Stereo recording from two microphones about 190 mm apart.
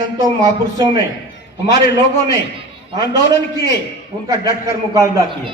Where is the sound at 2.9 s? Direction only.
25° right (ahead or behind).